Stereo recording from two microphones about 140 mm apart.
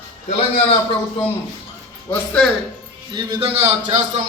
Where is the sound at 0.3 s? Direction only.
45° left (ahead or behind).